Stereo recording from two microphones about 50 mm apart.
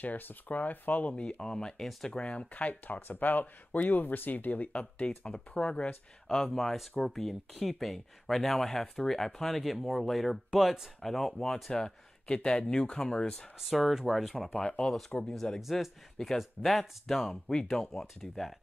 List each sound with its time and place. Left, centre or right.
0.0 s speech: left
1.4 s speech: centre
6.2 s speech: centre
13.6 s speech: centre
14.5 s speech: centre
15.7 s speech: centre